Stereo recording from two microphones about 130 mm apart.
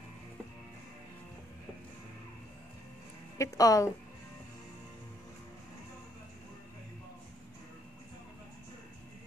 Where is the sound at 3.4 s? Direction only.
25° left (ahead or behind).